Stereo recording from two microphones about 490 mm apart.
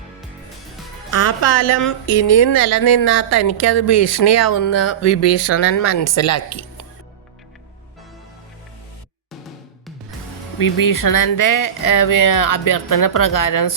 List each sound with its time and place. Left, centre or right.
1.1 s a woman's voice: left
10.6 s a woman's voice: left